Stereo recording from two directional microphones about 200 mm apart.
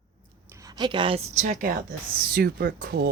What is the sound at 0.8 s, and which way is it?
Speech, 25° right (ahead or behind).